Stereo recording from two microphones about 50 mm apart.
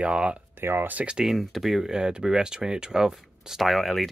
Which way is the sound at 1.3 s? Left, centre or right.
Centre.